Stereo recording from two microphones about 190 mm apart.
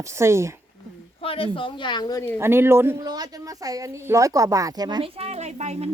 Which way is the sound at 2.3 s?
10° right (ahead or behind).